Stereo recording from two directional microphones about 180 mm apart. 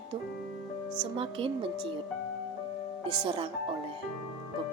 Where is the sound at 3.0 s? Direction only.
30° right (ahead or behind).